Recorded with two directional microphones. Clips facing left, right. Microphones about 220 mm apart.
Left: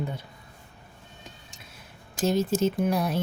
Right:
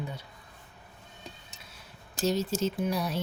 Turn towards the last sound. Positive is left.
turn(degrees=55)  # may be behind; listen again after turning